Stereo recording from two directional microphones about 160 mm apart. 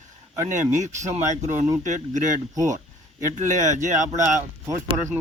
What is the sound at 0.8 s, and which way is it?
Speech, 45° right (ahead or behind).